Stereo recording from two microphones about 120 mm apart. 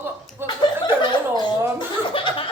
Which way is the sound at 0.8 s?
35° left (ahead or behind).